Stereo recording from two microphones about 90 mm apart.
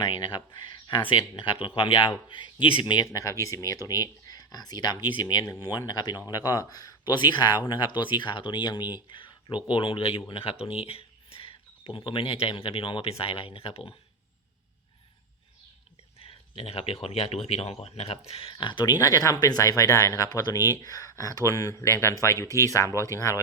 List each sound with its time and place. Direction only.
0.0 s speech: 60° left (ahead or behind)
3.1 s speech: 35° left (ahead or behind); by 13.9 s 90° left
16.2 s speech: 90° left
18.4 s speech: 55° left (ahead or behind)
18.9 s speech: 40° left (ahead or behind)